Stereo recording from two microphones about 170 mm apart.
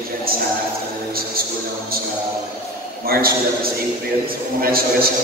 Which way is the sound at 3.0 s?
60° right (ahead or behind).